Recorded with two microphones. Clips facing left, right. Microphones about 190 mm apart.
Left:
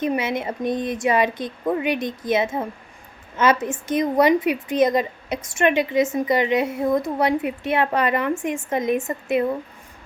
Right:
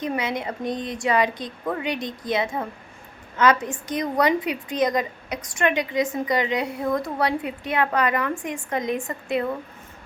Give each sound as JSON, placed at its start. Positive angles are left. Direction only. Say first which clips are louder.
{"t": 0.0, "sound": "a woman's voice", "louder": "left 3 dB", "side_deg": 25}